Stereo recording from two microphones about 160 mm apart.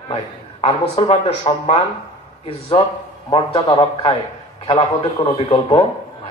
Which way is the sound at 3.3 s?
30° left (ahead or behind).